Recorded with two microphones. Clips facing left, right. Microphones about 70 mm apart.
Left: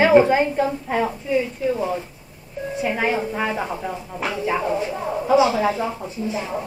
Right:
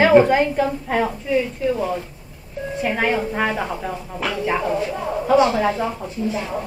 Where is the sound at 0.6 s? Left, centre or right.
Right.